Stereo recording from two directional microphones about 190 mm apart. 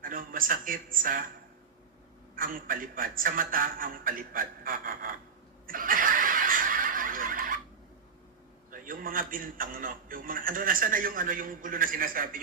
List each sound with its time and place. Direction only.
0.0 s speech: 45° right (ahead or behind)
2.3 s a man's voice: 45° right (ahead or behind)
5.6 s a sound: 45° right (ahead or behind)
8.7 s a man's voice: 45° right (ahead or behind)